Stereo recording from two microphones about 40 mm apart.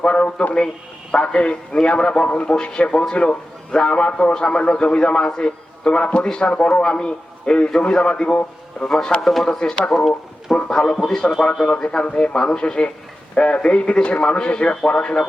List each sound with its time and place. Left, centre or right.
0.0 s a man's voice: left
9.2 s speech: centre
9.5 s a man's voice: centre
9.9 s a man's voice: centre; by 15.1 s left